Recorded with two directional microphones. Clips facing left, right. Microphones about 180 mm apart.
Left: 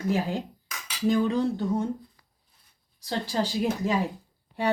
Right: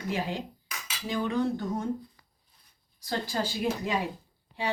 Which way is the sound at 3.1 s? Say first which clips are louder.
Left 3 dB; 35° left (ahead or behind).